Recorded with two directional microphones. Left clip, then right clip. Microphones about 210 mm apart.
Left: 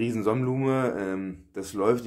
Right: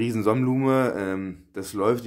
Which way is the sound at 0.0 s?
15° right (ahead or behind).